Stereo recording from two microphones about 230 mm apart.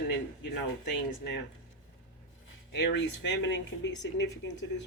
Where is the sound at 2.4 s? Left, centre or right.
Left.